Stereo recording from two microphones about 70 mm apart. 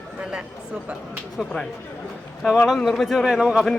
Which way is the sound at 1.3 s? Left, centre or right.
Centre.